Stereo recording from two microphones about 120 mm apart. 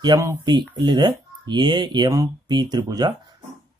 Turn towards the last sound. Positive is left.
turn(degrees=-35)  # may be behind; listen again after turning